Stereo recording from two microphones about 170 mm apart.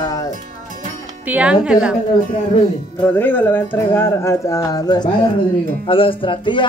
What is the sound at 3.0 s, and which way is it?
Speech, 10° left (ahead or behind).